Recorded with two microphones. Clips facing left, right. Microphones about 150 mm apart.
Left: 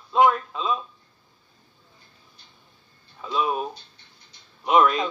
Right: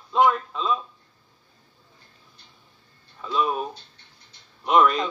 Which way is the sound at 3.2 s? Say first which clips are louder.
Even; 5° left (ahead or behind).